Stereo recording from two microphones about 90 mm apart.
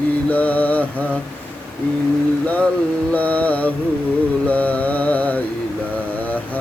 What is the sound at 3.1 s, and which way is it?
Mantra, 15° left (ahead or behind).